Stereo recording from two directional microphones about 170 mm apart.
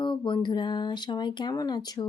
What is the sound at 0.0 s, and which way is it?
Speech, 30° left (ahead or behind).